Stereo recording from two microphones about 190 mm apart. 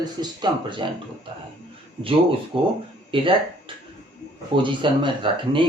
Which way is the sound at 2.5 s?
25° right (ahead or behind).